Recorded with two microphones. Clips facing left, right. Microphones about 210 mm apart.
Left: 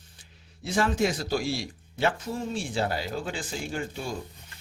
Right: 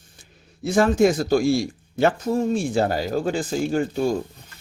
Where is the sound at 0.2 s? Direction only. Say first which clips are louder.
Right 11 dB; 45° right (ahead or behind).